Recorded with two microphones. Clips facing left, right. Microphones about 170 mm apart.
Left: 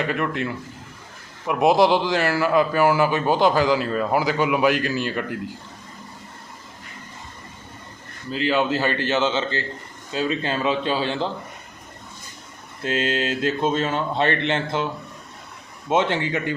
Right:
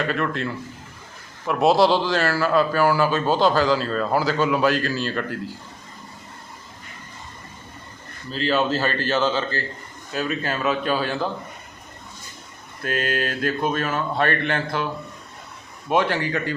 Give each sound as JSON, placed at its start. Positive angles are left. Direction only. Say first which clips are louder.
{"t": 0.0, "sound": "a man's voice", "louder": "even", "side_deg": 15}
{"t": 8.3, "sound": "speech", "louder": "even", "side_deg": 15}
{"t": 12.8, "sound": "speech", "louder": "left 1 dB", "side_deg": 25}
{"t": 15.9, "sound": "speech", "louder": "even", "side_deg": 20}